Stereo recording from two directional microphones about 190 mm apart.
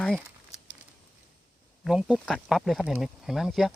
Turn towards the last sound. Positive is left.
turn(degrees=0)  # may be behind; listen again after turning